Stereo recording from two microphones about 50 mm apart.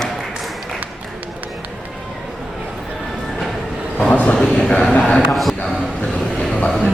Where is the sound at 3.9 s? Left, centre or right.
Left.